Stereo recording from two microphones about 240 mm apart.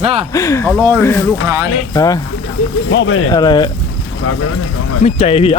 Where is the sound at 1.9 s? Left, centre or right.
Centre.